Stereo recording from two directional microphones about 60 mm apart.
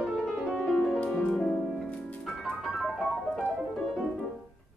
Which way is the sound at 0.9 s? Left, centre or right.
Left.